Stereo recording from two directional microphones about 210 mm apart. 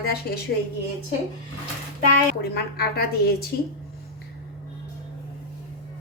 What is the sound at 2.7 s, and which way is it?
Speech, 45° left (ahead or behind).